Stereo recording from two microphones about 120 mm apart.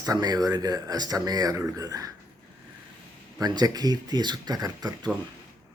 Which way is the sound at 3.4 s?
35° right (ahead or behind).